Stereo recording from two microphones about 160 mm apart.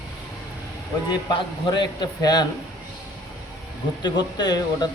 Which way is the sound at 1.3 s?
25° left (ahead or behind).